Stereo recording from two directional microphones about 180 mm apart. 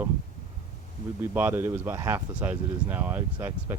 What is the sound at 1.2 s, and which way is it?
Speech, 10° right (ahead or behind).